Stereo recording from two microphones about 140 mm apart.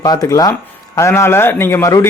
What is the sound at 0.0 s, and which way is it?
A man's voice, 25° left (ahead or behind).